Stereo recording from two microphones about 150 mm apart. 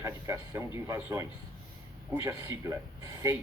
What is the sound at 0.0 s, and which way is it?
Speech, 20° right (ahead or behind).